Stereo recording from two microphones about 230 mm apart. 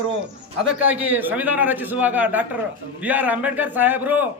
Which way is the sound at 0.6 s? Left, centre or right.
Centre.